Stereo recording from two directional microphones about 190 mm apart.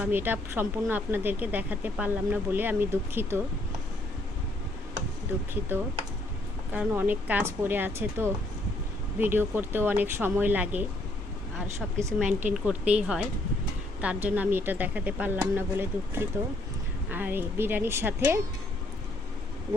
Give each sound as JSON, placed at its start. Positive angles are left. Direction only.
{"t": 0.0, "sound": "speech", "side_deg": -10}
{"t": 6.7, "sound": "speech", "side_deg": -10}
{"t": 11.9, "sound": "speech", "side_deg": -15}